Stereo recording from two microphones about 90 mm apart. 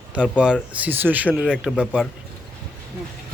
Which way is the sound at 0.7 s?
20° right (ahead or behind).